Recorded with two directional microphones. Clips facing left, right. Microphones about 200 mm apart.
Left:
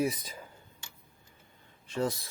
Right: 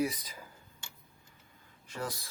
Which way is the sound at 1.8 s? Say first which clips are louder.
Left 7 dB; 25° left (ahead or behind).